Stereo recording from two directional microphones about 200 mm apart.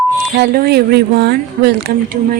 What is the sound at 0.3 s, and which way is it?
A woman's voice, 55° right (ahead or behind).